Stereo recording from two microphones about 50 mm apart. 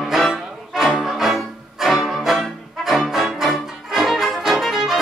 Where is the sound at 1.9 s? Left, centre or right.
Centre.